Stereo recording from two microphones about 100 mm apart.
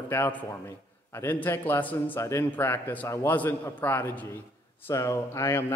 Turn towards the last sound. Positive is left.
turn(degrees=30)  # may be behind; listen again after turning